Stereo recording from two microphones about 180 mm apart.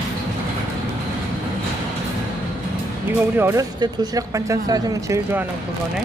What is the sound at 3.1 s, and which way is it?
Speech, 10° right (ahead or behind).